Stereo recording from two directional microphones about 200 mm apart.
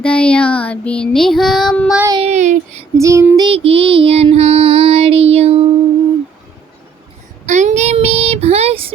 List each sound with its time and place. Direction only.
0.0 s child singing: 5° left (ahead or behind)
2.0 s speech: 25° right (ahead or behind)
3.0 s child singing: 15° right (ahead or behind); by 5.6 s 30° right (ahead or behind)
7.4 s child singing: 35° right (ahead or behind)